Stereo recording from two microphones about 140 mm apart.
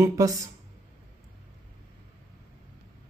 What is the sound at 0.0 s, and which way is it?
Speech, 25° right (ahead or behind).